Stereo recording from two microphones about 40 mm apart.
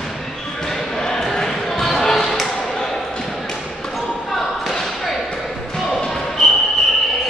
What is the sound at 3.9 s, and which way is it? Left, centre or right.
Basketball bounce, centre.